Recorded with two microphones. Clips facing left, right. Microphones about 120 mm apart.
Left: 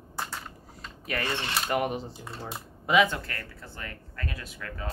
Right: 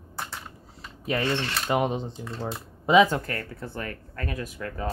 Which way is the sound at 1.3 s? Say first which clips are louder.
Right 3 dB; 15° left (ahead or behind).